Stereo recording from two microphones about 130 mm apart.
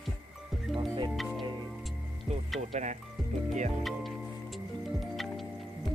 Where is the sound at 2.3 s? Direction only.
55° right (ahead or behind).